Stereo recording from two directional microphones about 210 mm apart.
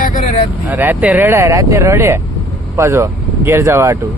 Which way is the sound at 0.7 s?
10° right (ahead or behind).